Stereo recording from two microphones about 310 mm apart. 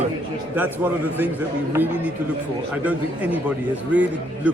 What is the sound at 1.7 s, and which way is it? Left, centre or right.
A man's voice, centre.